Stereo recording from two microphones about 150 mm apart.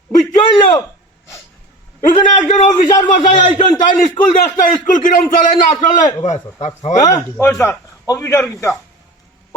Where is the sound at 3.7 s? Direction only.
60° left (ahead or behind).